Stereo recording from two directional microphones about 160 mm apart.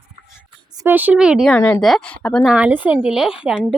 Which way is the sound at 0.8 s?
10° right (ahead or behind).